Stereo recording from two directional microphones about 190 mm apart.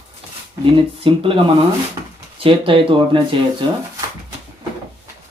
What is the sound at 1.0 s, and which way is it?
Speech, 30° right (ahead or behind).